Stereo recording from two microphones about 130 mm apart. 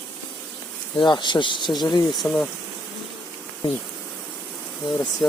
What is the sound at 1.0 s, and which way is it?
Speech, 35° left (ahead or behind).